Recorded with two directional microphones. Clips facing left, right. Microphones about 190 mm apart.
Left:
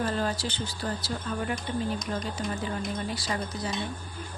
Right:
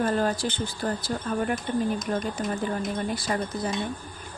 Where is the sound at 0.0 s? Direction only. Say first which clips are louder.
Right 4 dB; 50° right (ahead or behind).